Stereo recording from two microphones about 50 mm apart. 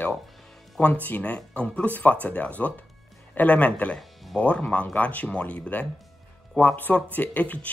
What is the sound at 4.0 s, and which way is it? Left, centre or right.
Music, centre.